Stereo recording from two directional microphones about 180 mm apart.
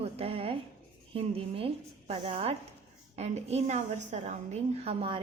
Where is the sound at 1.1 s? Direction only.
30° right (ahead or behind).